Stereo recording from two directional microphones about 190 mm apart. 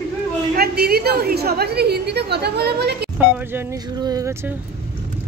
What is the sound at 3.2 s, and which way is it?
A woman's voice, 10° right (ahead or behind).